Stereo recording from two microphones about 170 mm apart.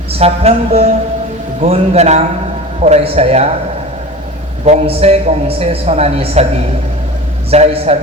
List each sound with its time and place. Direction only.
0.1 s a woman's voice: 35° right (ahead or behind)
4.6 s a woman's voice: 40° right (ahead or behind)
7.5 s a woman's voice: 35° right (ahead or behind)